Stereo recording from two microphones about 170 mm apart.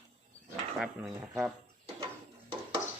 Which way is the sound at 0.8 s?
Centre (ahead or behind).